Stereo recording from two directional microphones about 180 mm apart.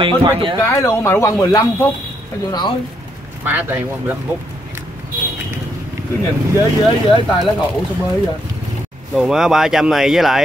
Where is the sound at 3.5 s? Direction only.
10° right (ahead or behind).